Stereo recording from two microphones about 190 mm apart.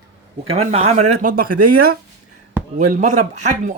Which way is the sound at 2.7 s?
40° right (ahead or behind).